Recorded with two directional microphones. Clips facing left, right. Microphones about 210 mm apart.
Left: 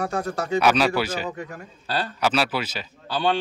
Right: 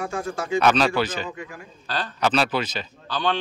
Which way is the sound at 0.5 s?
10° left (ahead or behind).